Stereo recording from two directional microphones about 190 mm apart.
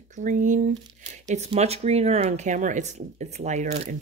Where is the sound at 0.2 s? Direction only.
45° right (ahead or behind).